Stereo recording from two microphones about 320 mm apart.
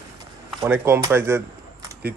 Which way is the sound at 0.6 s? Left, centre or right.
Centre.